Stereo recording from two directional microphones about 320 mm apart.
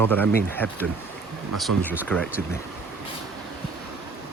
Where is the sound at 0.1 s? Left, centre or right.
Centre.